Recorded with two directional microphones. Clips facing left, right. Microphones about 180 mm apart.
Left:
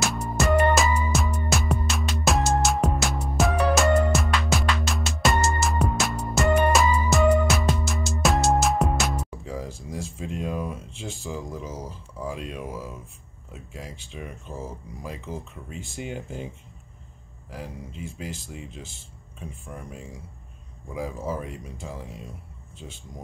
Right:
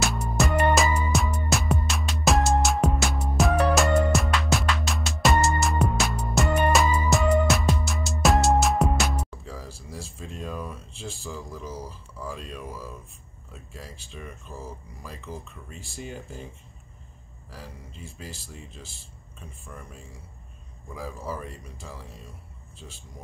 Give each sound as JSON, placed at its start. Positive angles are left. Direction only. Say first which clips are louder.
{"t": 0.0, "sound": "music", "louder": "left 1 dB", "side_deg": 0}
{"t": 9.4, "sound": "speech", "louder": "left 6 dB", "side_deg": 15}
{"t": 17.5, "sound": "speech", "louder": "left 6 dB", "side_deg": 15}
{"t": 20.9, "sound": "speech", "louder": "left 4 dB", "side_deg": 20}